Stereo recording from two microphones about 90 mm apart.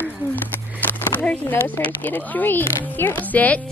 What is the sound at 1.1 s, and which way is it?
Speech, 20° left (ahead or behind).